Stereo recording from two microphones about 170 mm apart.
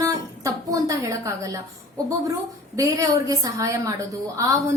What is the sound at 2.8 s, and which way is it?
A woman's voice, 20° right (ahead or behind).